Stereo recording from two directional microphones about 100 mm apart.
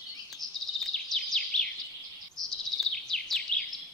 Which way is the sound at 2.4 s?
5° left (ahead or behind).